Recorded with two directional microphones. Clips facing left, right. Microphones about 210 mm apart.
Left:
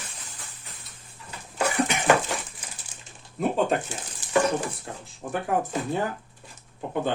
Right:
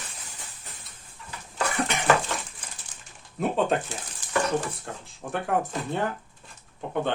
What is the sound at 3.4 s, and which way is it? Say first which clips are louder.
Speech: left 1 dB; centre (ahead or behind).